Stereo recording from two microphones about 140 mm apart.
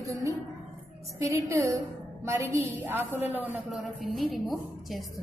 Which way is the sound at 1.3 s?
20° right (ahead or behind).